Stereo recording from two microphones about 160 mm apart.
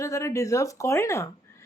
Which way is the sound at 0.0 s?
20° left (ahead or behind).